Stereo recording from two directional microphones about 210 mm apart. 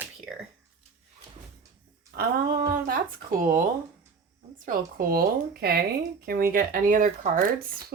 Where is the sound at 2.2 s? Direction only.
45° right (ahead or behind).